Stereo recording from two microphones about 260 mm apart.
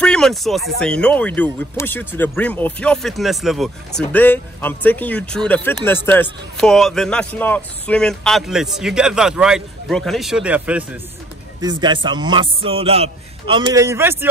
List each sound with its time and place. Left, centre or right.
0.0 s speech: centre
11.6 s speech: centre